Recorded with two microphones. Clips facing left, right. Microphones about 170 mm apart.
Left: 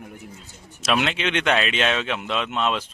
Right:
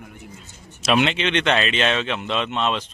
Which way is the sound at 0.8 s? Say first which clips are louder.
Right 3 dB; centre (ahead or behind).